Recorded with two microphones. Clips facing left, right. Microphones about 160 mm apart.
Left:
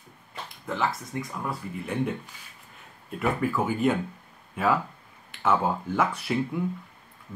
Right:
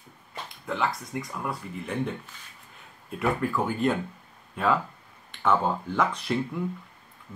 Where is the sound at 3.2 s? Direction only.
5° left (ahead or behind).